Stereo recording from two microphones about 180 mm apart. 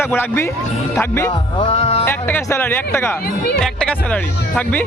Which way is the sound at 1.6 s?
30° left (ahead or behind).